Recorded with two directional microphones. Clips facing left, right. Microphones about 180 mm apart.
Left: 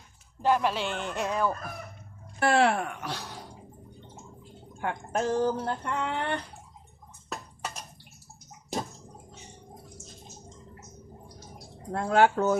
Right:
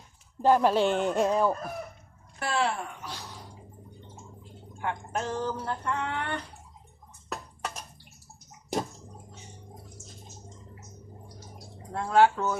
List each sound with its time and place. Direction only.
0.4 s speech: 40° right (ahead or behind)
1.2 s chicken: 30° right (ahead or behind)
2.4 s speech: 65° left (ahead or behind)
4.8 s speech: 45° left (ahead or behind)
5.6 s a sound: 25° left (ahead or behind)
11.9 s speech: 55° left (ahead or behind)